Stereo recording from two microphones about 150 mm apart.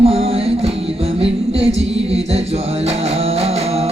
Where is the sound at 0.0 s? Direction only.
40° right (ahead or behind).